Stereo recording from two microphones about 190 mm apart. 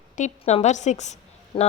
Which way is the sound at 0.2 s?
35° left (ahead or behind).